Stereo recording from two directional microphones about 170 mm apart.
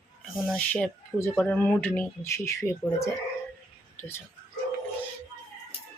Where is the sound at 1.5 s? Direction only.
10° left (ahead or behind).